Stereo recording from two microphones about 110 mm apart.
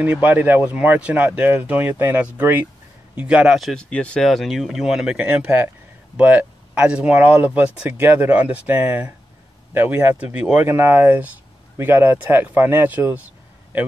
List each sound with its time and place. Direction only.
0.0 s speech: 15° right (ahead or behind)
3.5 s speech: 5° left (ahead or behind); by 13.3 s 15° right (ahead or behind)